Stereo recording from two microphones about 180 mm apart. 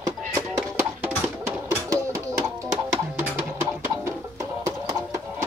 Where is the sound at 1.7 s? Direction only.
15° right (ahead or behind).